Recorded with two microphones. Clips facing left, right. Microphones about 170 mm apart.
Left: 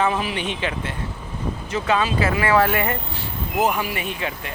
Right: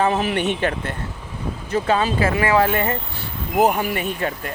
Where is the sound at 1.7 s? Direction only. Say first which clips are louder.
Right 2 dB; 35° right (ahead or behind).